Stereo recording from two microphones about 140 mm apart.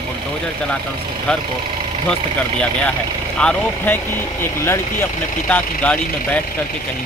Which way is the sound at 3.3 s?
10° left (ahead or behind).